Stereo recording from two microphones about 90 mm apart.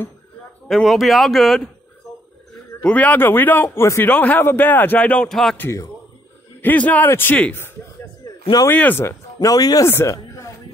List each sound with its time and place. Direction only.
0.7 s speech: centre (ahead or behind)
2.8 s a man's voice: 15° left (ahead or behind)
3.8 s a man's voice: 30° left (ahead or behind)
4.1 s a man's voice: 20° left (ahead or behind)
5.3 s speech: 5° left (ahead or behind)
6.6 s a man's voice: 20° left (ahead or behind)
8.2 s a sound: 45° left (ahead or behind)
8.6 s a man's voice: 20° left (ahead or behind)
9.0 s speech: 40° left (ahead or behind)
9.8 s speech: 30° left (ahead or behind)